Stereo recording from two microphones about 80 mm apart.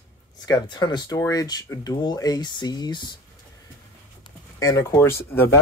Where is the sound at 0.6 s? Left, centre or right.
Left.